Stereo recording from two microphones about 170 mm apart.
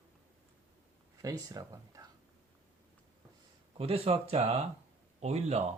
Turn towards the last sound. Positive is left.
turn(degrees=-40)  # may be behind; listen again after turning